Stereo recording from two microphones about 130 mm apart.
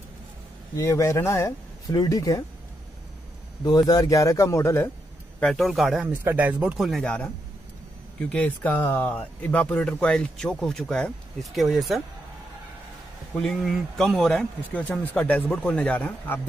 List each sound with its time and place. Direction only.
0.7 s speech: 25° left (ahead or behind)
3.6 s speech: 30° left (ahead or behind)
5.4 s speech: centre (ahead or behind)
6.0 s speech: 10° right (ahead or behind)
13.4 s speech: 5° left (ahead or behind)